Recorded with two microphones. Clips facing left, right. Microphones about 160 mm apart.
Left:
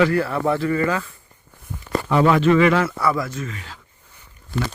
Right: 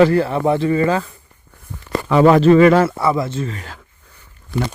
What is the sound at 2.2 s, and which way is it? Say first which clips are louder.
Speech: right 6 dB; 40° right (ahead or behind).